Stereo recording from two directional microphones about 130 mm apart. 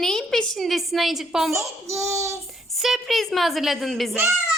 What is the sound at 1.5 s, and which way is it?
Speech, 20° right (ahead or behind).